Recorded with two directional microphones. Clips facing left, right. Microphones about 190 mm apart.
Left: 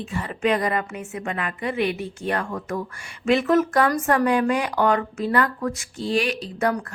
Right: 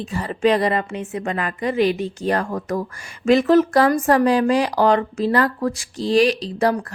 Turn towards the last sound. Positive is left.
turn(degrees=-30)  # may be behind; listen again after turning